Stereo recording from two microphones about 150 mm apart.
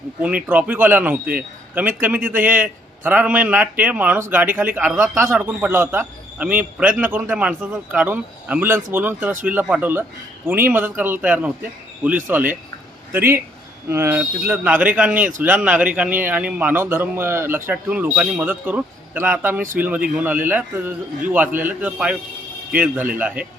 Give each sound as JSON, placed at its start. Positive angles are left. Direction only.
{"t": 0.4, "sound": "a man's voice", "side_deg": -10}
{"t": 1.2, "sound": "a man's voice", "side_deg": -75}
{"t": 2.0, "sound": "a man's voice", "side_deg": -10}